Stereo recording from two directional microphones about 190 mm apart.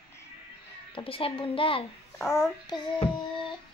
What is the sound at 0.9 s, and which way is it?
Speech, 30° left (ahead or behind).